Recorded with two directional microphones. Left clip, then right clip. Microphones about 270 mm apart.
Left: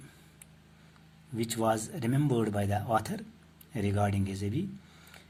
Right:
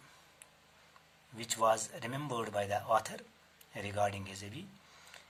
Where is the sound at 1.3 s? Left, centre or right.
Centre.